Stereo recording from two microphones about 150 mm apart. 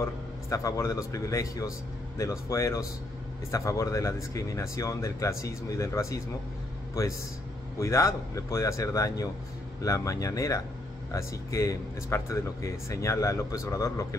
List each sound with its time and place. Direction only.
0.0 s speech: 20° left (ahead or behind)